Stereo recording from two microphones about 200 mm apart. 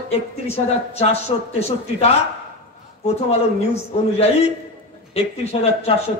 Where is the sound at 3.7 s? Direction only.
30° left (ahead or behind).